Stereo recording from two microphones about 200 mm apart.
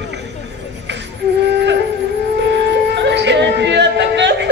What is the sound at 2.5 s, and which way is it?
Music, 60° right (ahead or behind).